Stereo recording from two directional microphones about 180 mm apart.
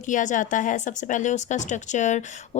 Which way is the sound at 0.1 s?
45° left (ahead or behind).